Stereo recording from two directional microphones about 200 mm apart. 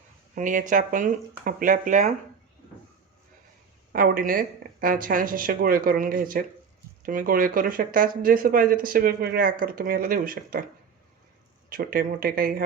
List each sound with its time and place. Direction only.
0.3 s speech: 40° right (ahead or behind)
3.9 s speech: 45° right (ahead or behind)
11.7 s speech: 45° right (ahead or behind)